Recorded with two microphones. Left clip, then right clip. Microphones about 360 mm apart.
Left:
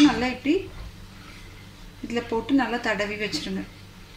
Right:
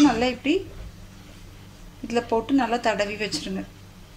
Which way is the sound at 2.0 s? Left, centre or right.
Centre.